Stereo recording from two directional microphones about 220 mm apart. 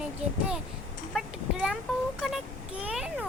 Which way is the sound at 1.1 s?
Centre (ahead or behind).